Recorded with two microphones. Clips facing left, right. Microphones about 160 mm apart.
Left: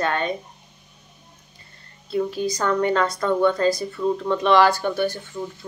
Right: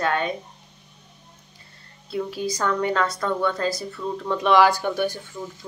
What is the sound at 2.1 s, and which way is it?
Speech, 5° right (ahead or behind).